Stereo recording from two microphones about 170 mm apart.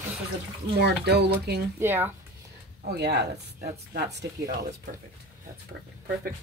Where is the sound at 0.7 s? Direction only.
75° right (ahead or behind).